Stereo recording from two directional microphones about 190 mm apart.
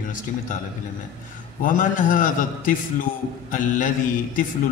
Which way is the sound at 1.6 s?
45° left (ahead or behind).